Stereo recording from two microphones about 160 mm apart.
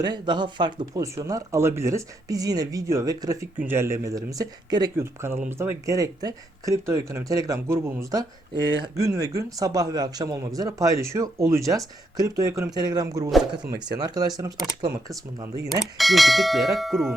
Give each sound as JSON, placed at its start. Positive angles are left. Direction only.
{"t": 0.0, "sound": "speech", "side_deg": -30}
{"t": 15.8, "sound": "speech", "side_deg": 0}